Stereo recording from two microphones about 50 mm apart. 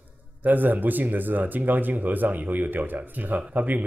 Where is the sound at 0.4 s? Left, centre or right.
Right.